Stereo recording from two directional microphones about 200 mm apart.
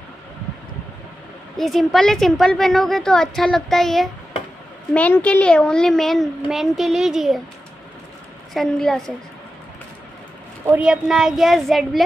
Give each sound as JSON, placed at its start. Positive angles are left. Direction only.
{"t": 1.6, "sound": "a woman's voice", "side_deg": 0}
{"t": 8.5, "sound": "a woman's voice", "side_deg": 0}
{"t": 10.7, "sound": "a woman's voice", "side_deg": -5}